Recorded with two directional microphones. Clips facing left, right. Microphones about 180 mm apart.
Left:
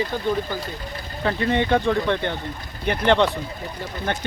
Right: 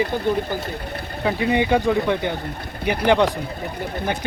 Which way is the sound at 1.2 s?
10° right (ahead or behind).